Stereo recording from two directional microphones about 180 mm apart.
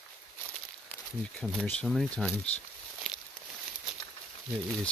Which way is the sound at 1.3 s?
5° left (ahead or behind).